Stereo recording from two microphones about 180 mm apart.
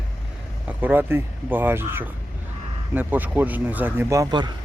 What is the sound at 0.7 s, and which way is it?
Speech, 10° right (ahead or behind).